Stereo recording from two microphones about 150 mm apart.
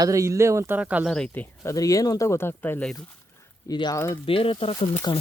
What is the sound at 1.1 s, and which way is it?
Speech, 10° left (ahead or behind).